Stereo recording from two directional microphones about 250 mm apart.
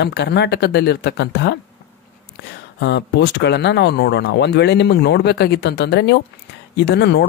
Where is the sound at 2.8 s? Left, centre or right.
Left.